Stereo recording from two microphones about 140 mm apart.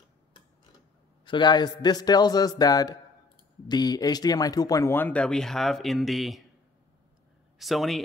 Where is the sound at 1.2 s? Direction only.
35° left (ahead or behind); by 6.4 s centre (ahead or behind).